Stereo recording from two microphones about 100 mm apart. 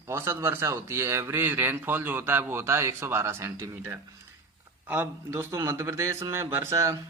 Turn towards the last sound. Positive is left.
turn(degrees=-30)  # may be behind; listen again after turning